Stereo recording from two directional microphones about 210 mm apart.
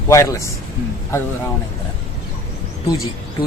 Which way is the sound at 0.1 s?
15° left (ahead or behind).